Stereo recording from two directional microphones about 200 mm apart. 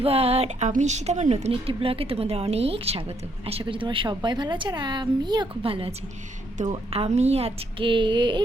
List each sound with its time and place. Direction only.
0.0 s speech: 30° right (ahead or behind)